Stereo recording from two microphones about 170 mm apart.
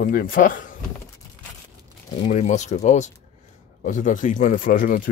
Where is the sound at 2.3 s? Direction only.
45° left (ahead or behind).